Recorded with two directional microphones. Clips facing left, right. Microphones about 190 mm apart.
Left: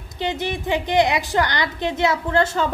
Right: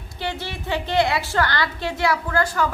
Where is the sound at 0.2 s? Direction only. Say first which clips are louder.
Left 5 dB; 20° left (ahead or behind).